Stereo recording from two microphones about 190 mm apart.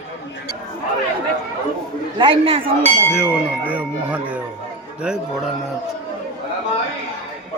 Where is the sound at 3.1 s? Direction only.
5° right (ahead or behind).